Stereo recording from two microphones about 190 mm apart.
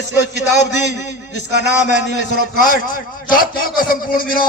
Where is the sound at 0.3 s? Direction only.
65° left (ahead or behind).